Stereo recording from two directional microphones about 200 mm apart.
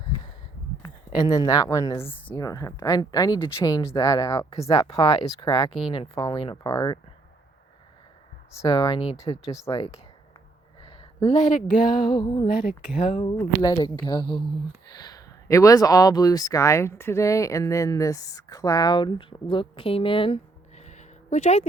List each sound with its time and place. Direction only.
0.8 s speech: 15° left (ahead or behind)
8.6 s speech: 20° left (ahead or behind)
10.8 s a sound: 25° left (ahead or behind)
11.9 s speech: 25° left (ahead or behind)